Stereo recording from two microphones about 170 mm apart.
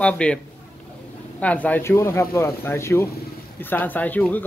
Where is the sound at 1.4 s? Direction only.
10° left (ahead or behind).